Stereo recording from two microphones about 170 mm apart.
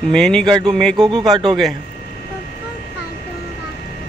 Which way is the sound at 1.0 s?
25° right (ahead or behind).